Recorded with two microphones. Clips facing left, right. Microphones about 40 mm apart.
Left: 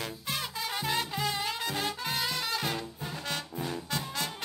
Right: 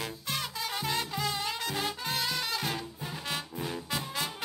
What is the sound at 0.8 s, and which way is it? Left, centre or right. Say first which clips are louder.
Music: left 1 dB; centre.